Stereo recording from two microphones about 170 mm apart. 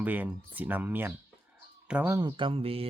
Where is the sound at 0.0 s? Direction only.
10° right (ahead or behind).